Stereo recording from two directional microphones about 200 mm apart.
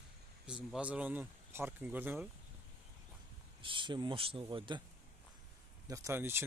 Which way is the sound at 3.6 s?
25° right (ahead or behind).